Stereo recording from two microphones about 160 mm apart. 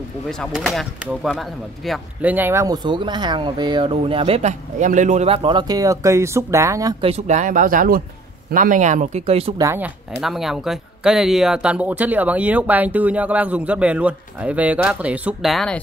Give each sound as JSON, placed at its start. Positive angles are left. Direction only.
{"t": 0.3, "sound": "speech", "side_deg": 0}
{"t": 2.3, "sound": "speech", "side_deg": -15}
{"t": 7.0, "sound": "speech", "side_deg": -40}
{"t": 9.6, "sound": "speech", "side_deg": -15}
{"t": 10.2, "sound": "speech", "side_deg": 0}